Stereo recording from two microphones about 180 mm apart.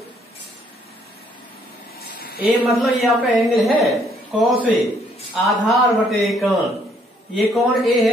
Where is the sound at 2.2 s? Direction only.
60° left (ahead or behind).